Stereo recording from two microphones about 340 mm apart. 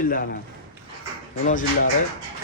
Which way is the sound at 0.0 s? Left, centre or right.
Left.